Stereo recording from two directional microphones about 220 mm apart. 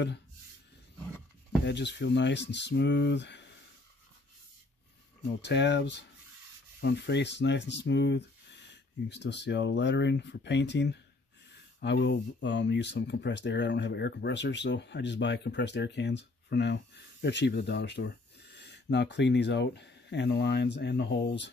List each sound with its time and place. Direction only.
1.6 s speech: 50° left (ahead or behind)
5.4 s speech: 50° left (ahead or behind)